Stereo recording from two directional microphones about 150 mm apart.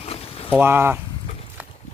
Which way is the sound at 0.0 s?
40° left (ahead or behind).